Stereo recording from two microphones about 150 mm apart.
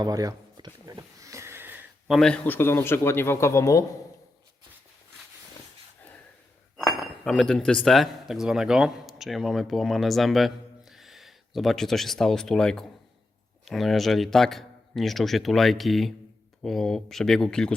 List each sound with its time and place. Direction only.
0.0 s a sound: 25° right (ahead or behind)
2.0 s a man's voice: centre (ahead or behind); by 3.8 s 20° left (ahead or behind)
6.7 s speech: centre (ahead or behind)